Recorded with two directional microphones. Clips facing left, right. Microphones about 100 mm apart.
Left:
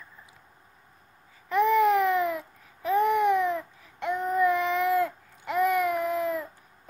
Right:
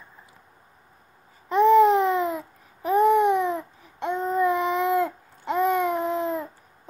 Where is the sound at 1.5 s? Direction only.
25° right (ahead or behind).